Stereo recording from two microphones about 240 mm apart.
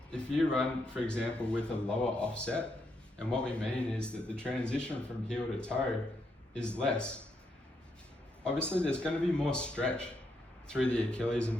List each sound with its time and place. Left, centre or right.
0.1 s speech: centre
8.4 s speech: centre